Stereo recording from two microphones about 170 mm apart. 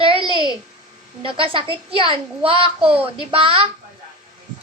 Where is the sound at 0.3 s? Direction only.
25° left (ahead or behind).